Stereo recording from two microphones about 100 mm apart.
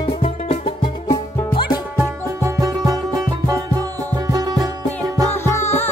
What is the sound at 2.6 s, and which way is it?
Music, 35° right (ahead or behind).